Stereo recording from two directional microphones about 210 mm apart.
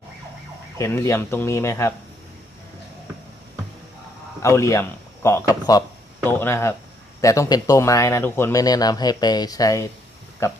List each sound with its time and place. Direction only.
0.8 s a man's voice: 15° left (ahead or behind)
4.4 s a man's voice: 15° left (ahead or behind)